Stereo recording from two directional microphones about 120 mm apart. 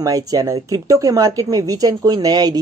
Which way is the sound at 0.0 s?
30° right (ahead or behind).